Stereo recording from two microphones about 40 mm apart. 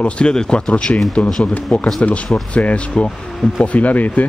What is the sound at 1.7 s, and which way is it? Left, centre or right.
Speech, centre.